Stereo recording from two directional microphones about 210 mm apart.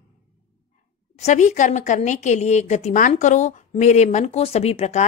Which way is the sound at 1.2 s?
35° left (ahead or behind).